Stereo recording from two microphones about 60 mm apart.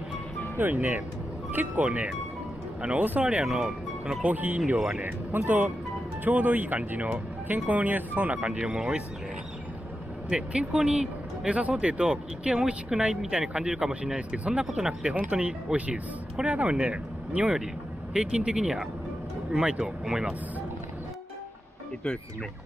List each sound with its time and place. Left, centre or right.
0.6 s speech: right
1.9 s speech: centre
3.4 s speech: centre
4.2 s speech: right
4.7 s speech: centre
5.0 s speech: right; by 9.0 s centre
10.3 s speech: centre
14.7 s speech: centre
15.0 s speech: right